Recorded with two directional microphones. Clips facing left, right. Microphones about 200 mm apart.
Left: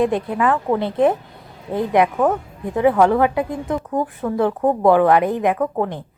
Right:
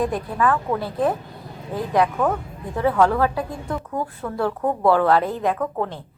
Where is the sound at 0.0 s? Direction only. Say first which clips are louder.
Left 4 dB; 25° left (ahead or behind).